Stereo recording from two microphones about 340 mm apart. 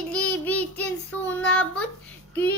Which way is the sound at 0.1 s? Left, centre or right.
Centre.